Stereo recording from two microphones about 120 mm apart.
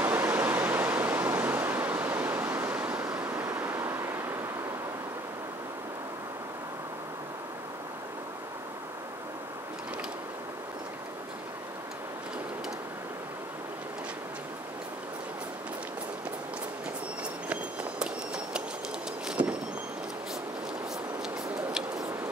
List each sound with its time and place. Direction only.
0.0 s pink noise: 15° right (ahead or behind)
3.3 s waves: 20° right (ahead or behind)
17.5 s run: 5° right (ahead or behind)
19.2 s vehicle: 10° right (ahead or behind)
21.2 s a sound: 5° right (ahead or behind)